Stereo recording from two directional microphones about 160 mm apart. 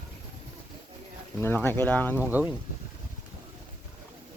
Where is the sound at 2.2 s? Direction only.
10° right (ahead or behind).